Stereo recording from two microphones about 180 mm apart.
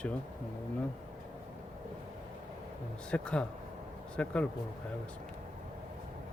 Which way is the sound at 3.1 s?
5° left (ahead or behind).